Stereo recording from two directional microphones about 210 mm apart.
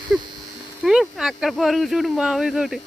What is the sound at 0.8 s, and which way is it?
Speech, centre (ahead or behind).